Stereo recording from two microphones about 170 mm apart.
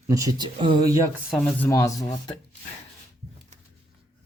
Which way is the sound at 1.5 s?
15° left (ahead or behind).